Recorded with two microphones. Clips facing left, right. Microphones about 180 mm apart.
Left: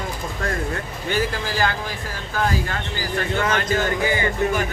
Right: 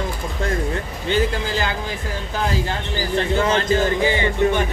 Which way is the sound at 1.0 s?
25° right (ahead or behind).